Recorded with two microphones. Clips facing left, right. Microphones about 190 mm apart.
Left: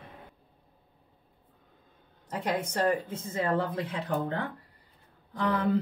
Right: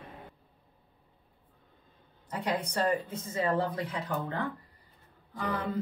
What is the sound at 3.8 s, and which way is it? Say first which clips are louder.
Speech: left 3 dB; 60° left (ahead or behind).